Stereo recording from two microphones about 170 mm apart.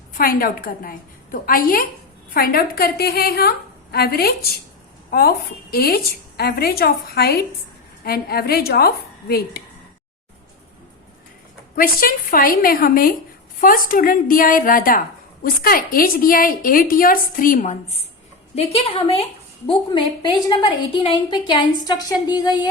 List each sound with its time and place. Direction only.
0.1 s a woman's voice: 60° left (ahead or behind)
11.8 s a woman's voice: 60° left (ahead or behind); by 22.7 s 25° left (ahead or behind)